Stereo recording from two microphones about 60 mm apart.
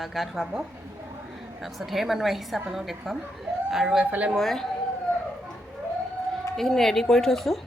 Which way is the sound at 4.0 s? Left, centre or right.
Right.